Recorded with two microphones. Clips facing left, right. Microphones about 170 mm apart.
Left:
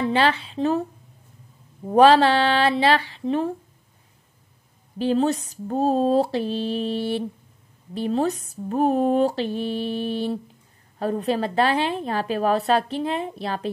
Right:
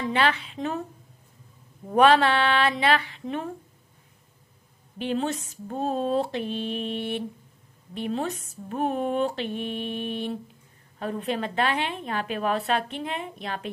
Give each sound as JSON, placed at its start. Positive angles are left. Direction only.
{"t": 0.0, "sound": "a woman's voice", "side_deg": 30}
{"t": 1.9, "sound": "a woman's voice", "side_deg": 30}
{"t": 4.9, "sound": "a woman's voice", "side_deg": 35}